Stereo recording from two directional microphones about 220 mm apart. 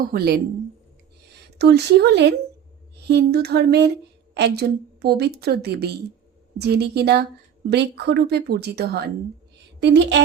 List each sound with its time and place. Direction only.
0.0 s a woman's voice: 40° right (ahead or behind)
1.5 s a woman's voice: 50° right (ahead or behind)